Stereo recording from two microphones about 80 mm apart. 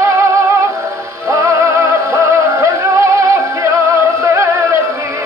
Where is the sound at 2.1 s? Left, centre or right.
Right.